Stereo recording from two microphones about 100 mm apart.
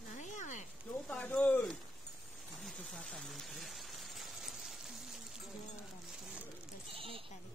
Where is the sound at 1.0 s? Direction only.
10° left (ahead or behind).